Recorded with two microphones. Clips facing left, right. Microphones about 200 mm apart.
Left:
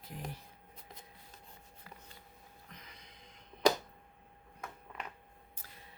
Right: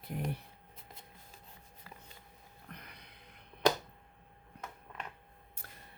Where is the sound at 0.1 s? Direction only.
55° right (ahead or behind).